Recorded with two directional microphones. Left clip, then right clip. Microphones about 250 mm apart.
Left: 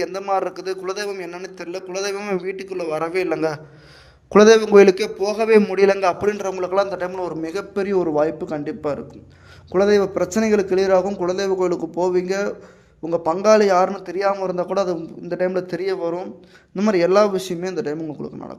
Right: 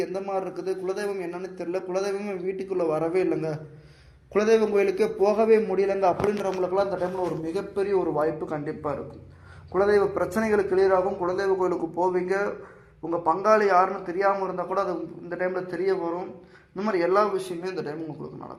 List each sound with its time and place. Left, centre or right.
0.0 s a man's voice: left
13.1 s a man's voice: left